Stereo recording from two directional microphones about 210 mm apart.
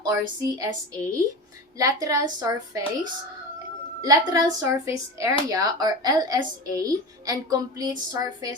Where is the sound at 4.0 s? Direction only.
15° right (ahead or behind).